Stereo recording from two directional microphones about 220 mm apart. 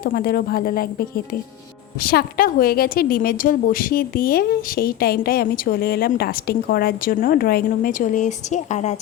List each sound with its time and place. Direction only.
0.0 s a woman's voice: 40° left (ahead or behind)